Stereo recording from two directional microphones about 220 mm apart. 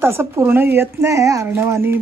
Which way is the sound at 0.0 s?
10° right (ahead or behind).